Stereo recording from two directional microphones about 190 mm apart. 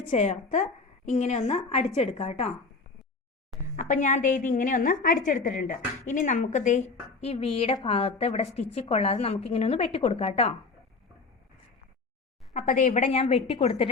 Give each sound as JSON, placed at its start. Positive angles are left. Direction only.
{"t": 0.1, "sound": "a woman's voice", "side_deg": 40}
{"t": 3.8, "sound": "a woman's voice", "side_deg": 40}
{"t": 12.5, "sound": "a woman's voice", "side_deg": 40}